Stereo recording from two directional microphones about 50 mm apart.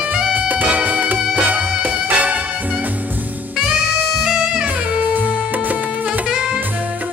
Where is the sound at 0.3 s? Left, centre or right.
Right.